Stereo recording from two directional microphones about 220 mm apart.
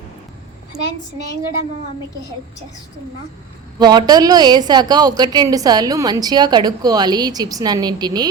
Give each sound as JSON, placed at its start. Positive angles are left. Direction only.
{"t": 3.8, "sound": "a woman's voice", "side_deg": -20}